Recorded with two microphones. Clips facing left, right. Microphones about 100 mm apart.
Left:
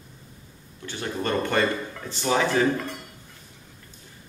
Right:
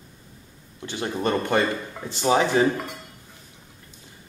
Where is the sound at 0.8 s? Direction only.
20° right (ahead or behind).